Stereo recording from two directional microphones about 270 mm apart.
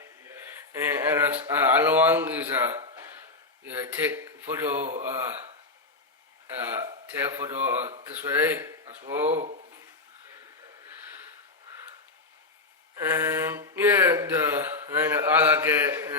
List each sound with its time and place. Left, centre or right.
0.0 s a sound: centre
1.5 s speech: centre
3.9 s speech: centre
6.8 s speech: centre
9.4 s speech: right
13.0 s a sound: centre